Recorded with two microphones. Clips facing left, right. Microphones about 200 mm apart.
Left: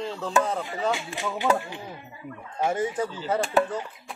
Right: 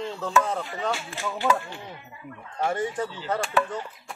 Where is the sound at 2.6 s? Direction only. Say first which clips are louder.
Left 1 dB; 10° left (ahead or behind).